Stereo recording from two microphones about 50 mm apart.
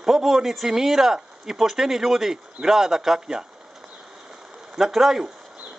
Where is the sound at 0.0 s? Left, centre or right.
Centre.